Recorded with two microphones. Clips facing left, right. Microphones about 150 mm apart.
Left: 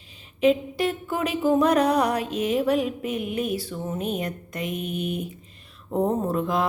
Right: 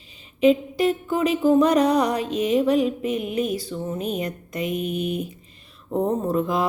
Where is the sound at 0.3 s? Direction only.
Centre (ahead or behind).